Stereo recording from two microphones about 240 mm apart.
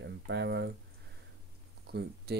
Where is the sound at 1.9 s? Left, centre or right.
Right.